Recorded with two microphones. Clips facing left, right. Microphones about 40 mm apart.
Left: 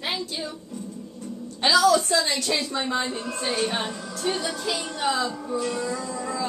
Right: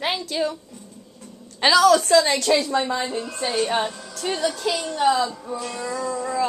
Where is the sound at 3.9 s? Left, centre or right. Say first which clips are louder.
Left 3 dB; centre.